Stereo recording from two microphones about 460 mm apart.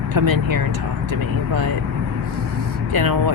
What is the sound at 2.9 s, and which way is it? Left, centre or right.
Speech, right.